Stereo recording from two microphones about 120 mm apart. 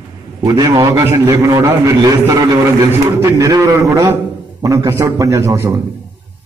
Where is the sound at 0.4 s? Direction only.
30° right (ahead or behind).